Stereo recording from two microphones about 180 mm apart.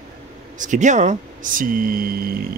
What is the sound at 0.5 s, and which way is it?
Speech, 45° right (ahead or behind).